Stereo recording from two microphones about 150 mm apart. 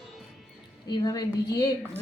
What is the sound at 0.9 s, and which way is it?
Speech, 25° left (ahead or behind).